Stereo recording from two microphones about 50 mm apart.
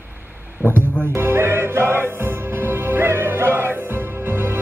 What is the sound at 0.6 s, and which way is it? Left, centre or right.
Speech, left.